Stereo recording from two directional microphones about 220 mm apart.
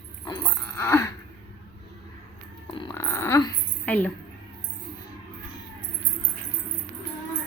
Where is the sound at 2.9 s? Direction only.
10° left (ahead or behind).